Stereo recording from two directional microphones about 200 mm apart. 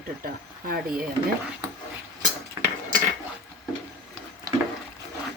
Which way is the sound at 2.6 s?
20° right (ahead or behind).